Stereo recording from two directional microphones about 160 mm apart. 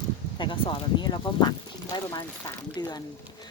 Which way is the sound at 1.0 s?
25° left (ahead or behind).